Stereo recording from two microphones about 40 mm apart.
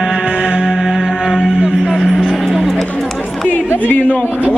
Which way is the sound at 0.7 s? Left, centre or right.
Centre.